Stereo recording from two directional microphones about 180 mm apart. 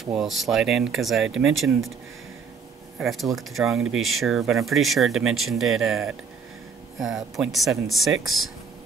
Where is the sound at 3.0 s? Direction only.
Centre (ahead or behind).